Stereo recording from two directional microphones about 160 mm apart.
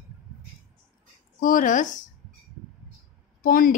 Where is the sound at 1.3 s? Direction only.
55° left (ahead or behind).